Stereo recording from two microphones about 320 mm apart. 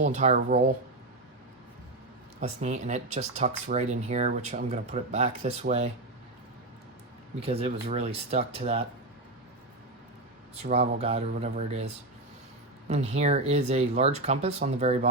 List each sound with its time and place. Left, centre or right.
0.0 s speech: right
2.4 s speech: right
7.4 s speech: centre
10.5 s speech: centre
12.9 s speech: centre